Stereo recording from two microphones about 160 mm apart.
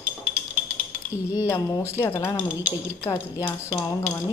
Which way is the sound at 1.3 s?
25° left (ahead or behind).